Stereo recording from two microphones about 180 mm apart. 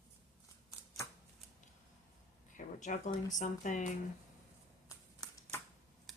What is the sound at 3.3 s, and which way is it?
Speech, 45° left (ahead or behind).